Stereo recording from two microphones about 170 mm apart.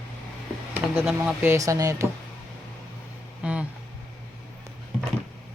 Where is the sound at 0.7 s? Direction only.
10° right (ahead or behind).